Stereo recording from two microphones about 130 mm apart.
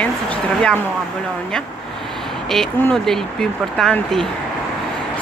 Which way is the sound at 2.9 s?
5° left (ahead or behind).